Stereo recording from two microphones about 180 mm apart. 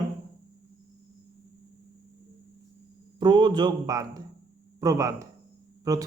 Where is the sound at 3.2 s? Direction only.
25° right (ahead or behind).